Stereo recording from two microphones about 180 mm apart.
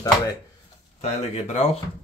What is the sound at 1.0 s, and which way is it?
Speech, 40° left (ahead or behind).